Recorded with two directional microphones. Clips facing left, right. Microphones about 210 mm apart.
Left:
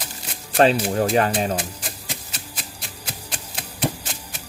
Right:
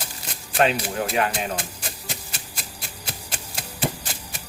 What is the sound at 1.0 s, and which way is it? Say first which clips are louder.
Speech: left 4 dB; 35° left (ahead or behind).